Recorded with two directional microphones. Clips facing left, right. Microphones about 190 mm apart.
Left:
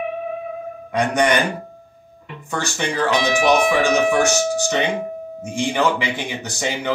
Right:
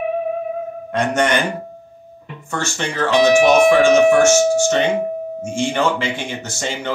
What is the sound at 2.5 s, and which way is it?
Speech, 15° left (ahead or behind).